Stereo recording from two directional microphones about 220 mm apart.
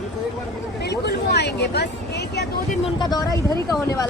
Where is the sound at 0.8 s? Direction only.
50° left (ahead or behind).